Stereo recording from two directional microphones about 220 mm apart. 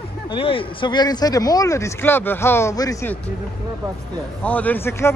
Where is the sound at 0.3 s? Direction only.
25° left (ahead or behind).